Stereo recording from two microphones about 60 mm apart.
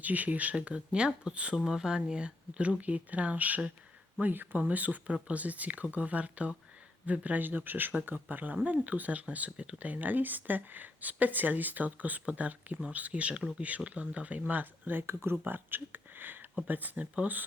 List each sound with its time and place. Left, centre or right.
0.0 s speech: right
15.0 s speech: right